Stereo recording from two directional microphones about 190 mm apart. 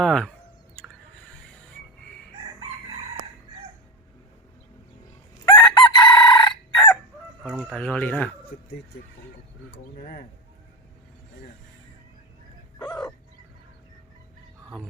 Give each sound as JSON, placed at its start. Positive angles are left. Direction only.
{"t": 0.0, "sound": "speech", "side_deg": 5}
{"t": 5.5, "sound": "chicken", "side_deg": 25}
{"t": 7.7, "sound": "speech", "side_deg": 5}
{"t": 8.5, "sound": "speech", "side_deg": 55}
{"t": 9.7, "sound": "speech", "side_deg": 55}